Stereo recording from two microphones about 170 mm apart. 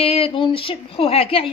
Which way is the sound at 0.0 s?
35° left (ahead or behind).